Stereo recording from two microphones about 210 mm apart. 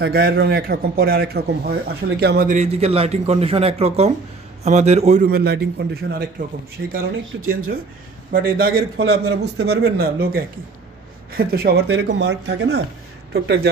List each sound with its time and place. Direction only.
0.0 s a man's voice: 45° right (ahead or behind)